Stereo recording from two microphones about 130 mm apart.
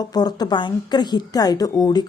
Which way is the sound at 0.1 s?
30° left (ahead or behind).